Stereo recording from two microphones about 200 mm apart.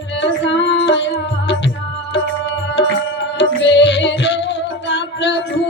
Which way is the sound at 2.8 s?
60° left (ahead or behind).